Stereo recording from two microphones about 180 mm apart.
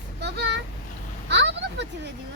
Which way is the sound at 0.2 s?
70° right (ahead or behind).